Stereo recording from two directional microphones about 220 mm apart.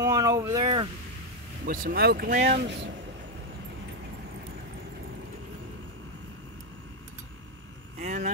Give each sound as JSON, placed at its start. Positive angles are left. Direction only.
{"t": 0.0, "sound": "a sound", "side_deg": -15}
{"t": 1.7, "sound": "speech", "side_deg": -40}
{"t": 8.0, "sound": "speech", "side_deg": -35}